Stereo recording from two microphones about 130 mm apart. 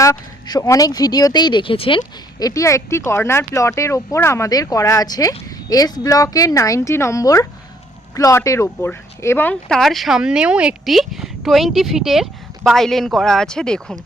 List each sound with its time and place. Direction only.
0.0 s speech: 25° left (ahead or behind); by 2.0 s 45° left (ahead or behind)
2.4 s speech: 25° left (ahead or behind)
9.6 s speech: 5° left (ahead or behind)